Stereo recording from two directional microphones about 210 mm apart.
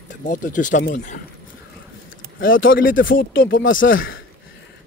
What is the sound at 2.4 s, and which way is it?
Speech, 65° left (ahead or behind).